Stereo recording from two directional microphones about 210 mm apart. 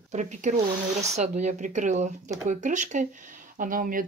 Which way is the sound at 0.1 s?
35° right (ahead or behind).